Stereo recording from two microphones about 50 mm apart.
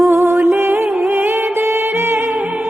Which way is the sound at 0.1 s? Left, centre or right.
Right.